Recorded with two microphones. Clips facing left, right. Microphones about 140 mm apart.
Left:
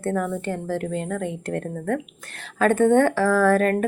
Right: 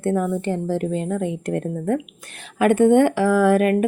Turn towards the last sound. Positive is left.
turn(degrees=-15)  # may be behind; listen again after turning